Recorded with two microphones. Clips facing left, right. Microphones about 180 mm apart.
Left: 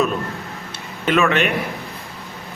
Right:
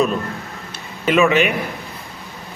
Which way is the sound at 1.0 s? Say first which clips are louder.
Right 3 dB; 5° right (ahead or behind).